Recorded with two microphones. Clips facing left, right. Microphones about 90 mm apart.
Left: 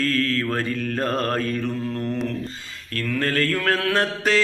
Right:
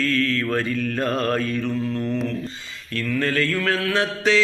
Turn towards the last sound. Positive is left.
turn(degrees=50)  # may be behind; listen again after turning